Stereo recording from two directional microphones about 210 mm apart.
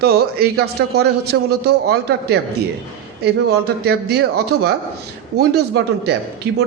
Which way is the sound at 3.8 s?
50° right (ahead or behind).